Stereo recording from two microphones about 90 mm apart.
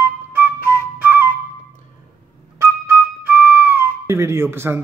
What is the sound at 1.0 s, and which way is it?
Flute, 20° right (ahead or behind).